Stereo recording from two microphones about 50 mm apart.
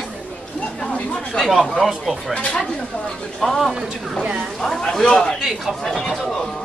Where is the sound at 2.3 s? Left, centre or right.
Centre.